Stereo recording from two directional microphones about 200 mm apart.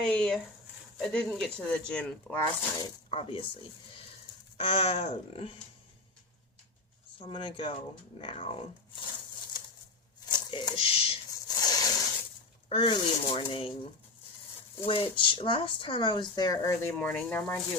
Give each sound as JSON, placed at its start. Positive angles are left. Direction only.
{"t": 0.0, "sound": "speech", "side_deg": 0}
{"t": 3.1, "sound": "speech", "side_deg": 25}
{"t": 4.5, "sound": "speech", "side_deg": 30}
{"t": 7.2, "sound": "speech", "side_deg": 25}
{"t": 10.2, "sound": "a sound", "side_deg": 20}
{"t": 12.6, "sound": "speech", "side_deg": 25}
{"t": 14.8, "sound": "speech", "side_deg": 25}
{"t": 16.9, "sound": "speech", "side_deg": 5}